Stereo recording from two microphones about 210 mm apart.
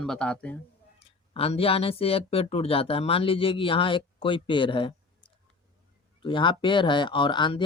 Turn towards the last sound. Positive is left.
turn(degrees=20)  # may be behind; listen again after turning